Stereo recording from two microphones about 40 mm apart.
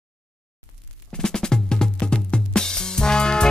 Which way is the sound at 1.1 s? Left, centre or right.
Centre.